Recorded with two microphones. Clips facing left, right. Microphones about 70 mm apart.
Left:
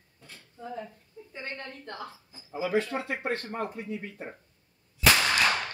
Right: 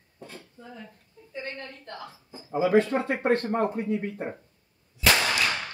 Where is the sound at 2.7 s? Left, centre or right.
Right.